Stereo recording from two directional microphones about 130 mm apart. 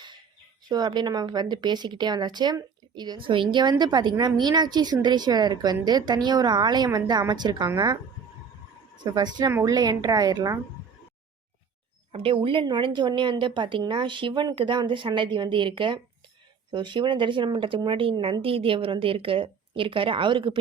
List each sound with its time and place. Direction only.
0.7 s a woman's voice: 35° right (ahead or behind)
9.1 s a woman's voice: 30° right (ahead or behind)
12.1 s a woman's voice: 45° right (ahead or behind)